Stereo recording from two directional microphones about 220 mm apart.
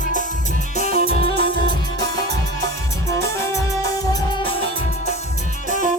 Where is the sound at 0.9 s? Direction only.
40° right (ahead or behind).